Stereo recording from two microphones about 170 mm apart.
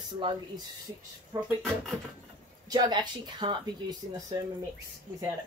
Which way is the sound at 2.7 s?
25° right (ahead or behind).